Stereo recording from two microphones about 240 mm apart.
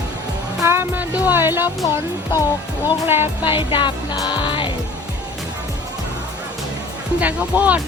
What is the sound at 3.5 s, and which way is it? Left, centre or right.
Music, left.